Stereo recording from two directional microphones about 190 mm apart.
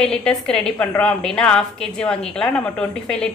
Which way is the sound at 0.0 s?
5° left (ahead or behind).